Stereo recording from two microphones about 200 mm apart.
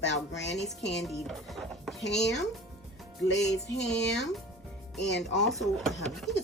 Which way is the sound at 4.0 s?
60° left (ahead or behind).